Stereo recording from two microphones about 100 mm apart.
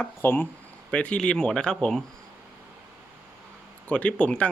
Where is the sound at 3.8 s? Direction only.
15° left (ahead or behind).